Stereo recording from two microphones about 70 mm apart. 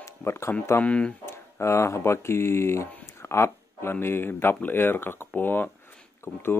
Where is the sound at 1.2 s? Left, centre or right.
Left.